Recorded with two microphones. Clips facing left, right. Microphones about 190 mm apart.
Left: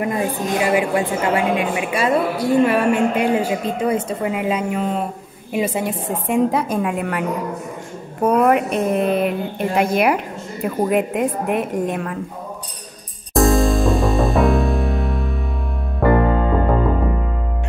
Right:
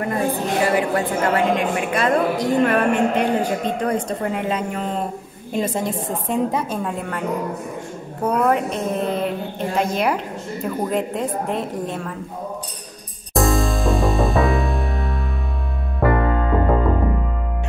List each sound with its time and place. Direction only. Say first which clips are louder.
0.0 s a woman's voice: even; 15° left (ahead or behind)
8.5 s a woman's voice: left 4 dB; 10° left (ahead or behind)
13.3 s music: left 4 dB; centre (ahead or behind)